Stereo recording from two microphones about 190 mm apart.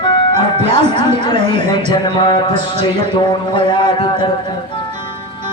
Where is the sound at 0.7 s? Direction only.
35° right (ahead or behind).